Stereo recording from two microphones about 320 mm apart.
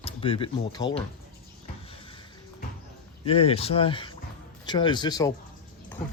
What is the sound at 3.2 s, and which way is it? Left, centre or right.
Speech, centre.